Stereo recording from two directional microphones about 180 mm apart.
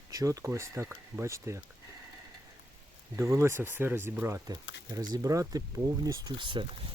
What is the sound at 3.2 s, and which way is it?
Speech, 15° right (ahead or behind).